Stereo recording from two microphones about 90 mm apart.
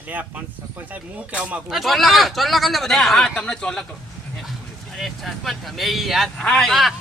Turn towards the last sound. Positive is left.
turn(degrees=0)  # may be behind; listen again after turning